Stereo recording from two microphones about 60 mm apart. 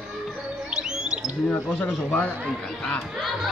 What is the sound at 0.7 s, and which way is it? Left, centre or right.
Music, centre.